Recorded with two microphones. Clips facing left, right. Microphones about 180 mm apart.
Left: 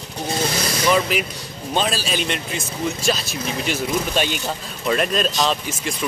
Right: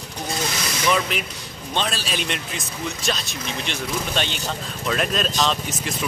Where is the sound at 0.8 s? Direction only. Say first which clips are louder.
Left 3 dB; 5° left (ahead or behind).